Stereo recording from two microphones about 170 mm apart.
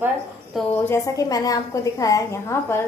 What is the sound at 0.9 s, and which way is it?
A woman's voice, 20° left (ahead or behind).